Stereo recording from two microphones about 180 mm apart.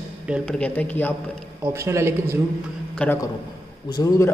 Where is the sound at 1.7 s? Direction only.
15° right (ahead or behind).